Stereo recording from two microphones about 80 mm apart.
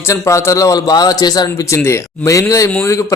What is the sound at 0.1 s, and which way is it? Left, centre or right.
A man's voice, left.